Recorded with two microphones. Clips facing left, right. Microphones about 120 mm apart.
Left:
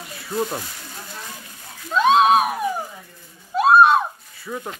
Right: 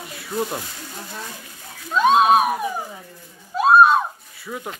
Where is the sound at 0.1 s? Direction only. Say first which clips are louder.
Left 1 dB; centre (ahead or behind).